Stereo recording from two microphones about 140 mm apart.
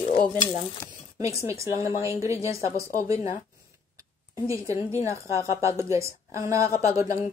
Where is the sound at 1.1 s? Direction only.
20° right (ahead or behind).